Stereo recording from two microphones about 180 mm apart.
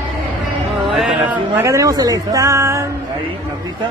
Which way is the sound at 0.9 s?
5° right (ahead or behind).